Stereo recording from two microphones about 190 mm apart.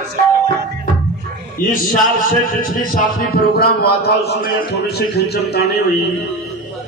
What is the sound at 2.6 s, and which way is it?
Speech, 45° left (ahead or behind).